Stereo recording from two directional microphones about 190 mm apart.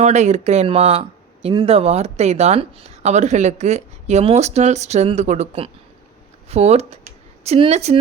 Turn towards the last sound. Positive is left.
turn(degrees=-35)  # may be behind; listen again after turning